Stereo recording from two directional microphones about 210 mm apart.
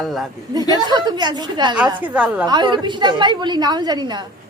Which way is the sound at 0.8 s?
20° right (ahead or behind).